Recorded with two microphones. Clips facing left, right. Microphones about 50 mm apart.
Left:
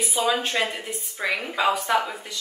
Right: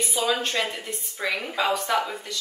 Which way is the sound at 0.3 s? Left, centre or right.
Centre.